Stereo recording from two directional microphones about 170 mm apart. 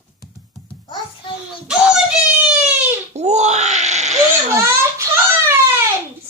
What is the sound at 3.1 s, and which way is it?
Wail, 40° right (ahead or behind).